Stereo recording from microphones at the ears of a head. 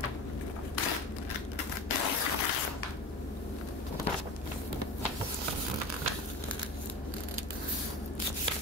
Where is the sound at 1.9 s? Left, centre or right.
Left.